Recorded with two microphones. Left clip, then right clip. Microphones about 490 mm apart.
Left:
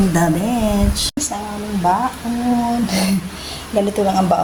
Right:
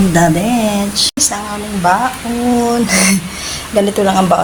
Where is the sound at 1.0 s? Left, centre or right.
Left.